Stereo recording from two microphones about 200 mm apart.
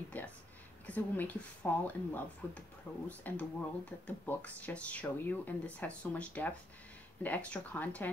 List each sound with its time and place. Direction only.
0.1 s speech: 5° left (ahead or behind)